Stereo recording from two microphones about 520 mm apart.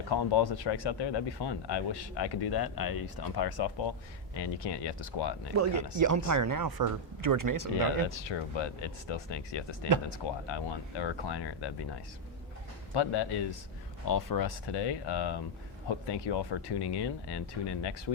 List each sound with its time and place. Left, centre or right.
0.1 s speech: left
5.5 s speech: right
8.1 s speech: left
12.9 s speech: left